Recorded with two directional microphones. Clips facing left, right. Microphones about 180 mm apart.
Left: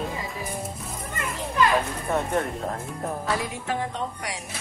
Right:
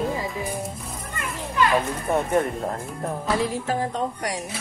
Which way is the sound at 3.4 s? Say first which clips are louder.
Right 5 dB; 40° right (ahead or behind).